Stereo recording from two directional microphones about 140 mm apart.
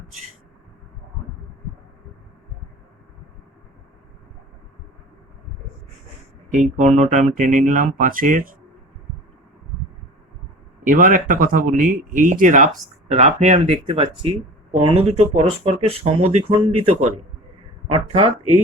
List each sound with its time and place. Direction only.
6.5 s speech: 60° right (ahead or behind)
10.8 s speech: 70° right (ahead or behind)
13.1 s speech: 50° right (ahead or behind)